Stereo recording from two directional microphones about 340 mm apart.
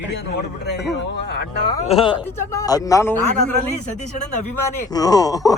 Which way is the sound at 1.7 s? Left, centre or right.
Centre.